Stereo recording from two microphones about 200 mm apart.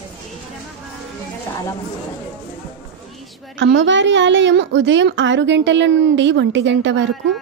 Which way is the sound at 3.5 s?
65° right (ahead or behind).